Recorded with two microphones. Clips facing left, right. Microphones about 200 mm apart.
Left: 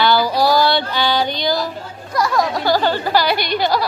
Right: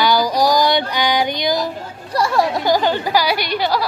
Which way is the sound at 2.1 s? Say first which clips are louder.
Right 1 dB; 30° right (ahead or behind).